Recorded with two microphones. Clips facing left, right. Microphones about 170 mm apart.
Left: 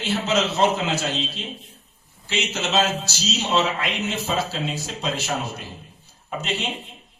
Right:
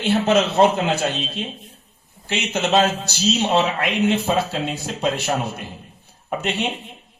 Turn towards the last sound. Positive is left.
turn(degrees=-60)  # may be behind; listen again after turning